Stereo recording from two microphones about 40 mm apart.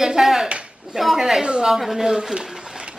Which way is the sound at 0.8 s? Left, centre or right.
Centre.